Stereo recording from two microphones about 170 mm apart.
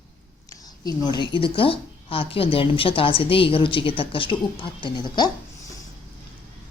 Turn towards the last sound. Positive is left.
turn(degrees=25)  # may be behind; listen again after turning